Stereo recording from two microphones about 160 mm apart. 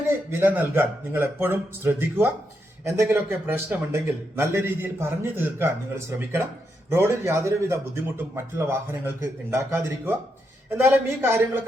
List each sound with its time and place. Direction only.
0.1 s speech: 15° right (ahead or behind)